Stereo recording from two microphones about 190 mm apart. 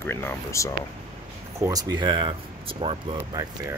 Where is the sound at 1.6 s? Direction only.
20° right (ahead or behind).